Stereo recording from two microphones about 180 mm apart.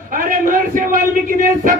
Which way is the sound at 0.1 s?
50° right (ahead or behind).